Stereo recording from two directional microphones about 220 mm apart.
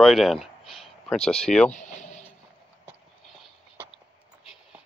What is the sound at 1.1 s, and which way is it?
Speech, 25° left (ahead or behind).